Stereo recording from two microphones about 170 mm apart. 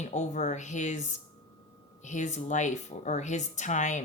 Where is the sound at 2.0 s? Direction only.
45° left (ahead or behind).